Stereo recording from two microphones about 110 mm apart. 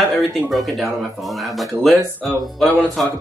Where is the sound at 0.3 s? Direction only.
Centre (ahead or behind).